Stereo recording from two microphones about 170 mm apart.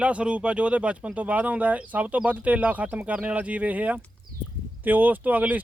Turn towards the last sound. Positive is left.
turn(degrees=-10)  # may be behind; listen again after turning